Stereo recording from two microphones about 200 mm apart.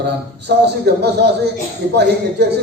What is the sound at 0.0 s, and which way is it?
A man's voice, 55° right (ahead or behind).